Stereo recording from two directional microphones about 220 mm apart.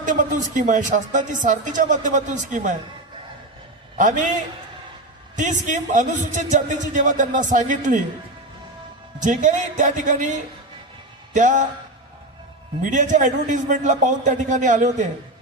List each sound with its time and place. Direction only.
0.0 s speech: 35° right (ahead or behind)
4.0 s speech: 35° right (ahead or behind)
5.3 s speech: 35° right (ahead or behind)
9.2 s speech: 35° right (ahead or behind)
12.9 s speech: 35° right (ahead or behind)